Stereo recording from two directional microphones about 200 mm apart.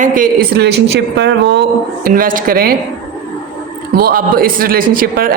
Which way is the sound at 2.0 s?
45° right (ahead or behind).